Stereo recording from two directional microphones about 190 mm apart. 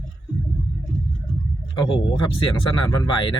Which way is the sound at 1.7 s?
25° left (ahead or behind).